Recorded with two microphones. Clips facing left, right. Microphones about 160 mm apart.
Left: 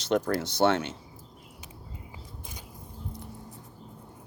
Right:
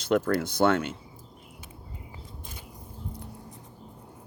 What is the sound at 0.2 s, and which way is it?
Speech, 55° right (ahead or behind).